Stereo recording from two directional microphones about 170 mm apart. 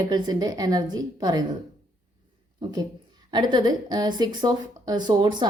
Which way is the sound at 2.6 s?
25° right (ahead or behind).